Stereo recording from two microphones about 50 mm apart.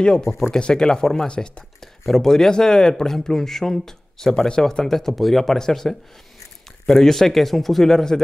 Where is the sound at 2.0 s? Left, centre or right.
Centre.